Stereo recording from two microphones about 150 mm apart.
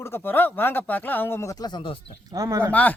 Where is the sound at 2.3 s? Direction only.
20° right (ahead or behind).